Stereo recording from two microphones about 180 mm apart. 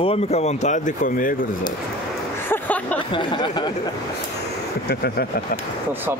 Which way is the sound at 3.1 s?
25° left (ahead or behind).